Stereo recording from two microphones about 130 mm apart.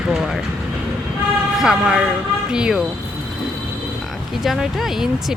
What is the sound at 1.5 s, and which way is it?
Speech, 5° right (ahead or behind).